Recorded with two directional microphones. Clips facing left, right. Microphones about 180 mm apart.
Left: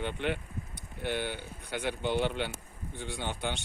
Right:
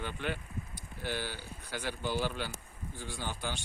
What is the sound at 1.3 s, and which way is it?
Speech, 60° left (ahead or behind).